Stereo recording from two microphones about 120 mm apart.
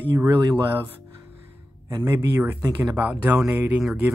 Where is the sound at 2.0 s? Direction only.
20° right (ahead or behind).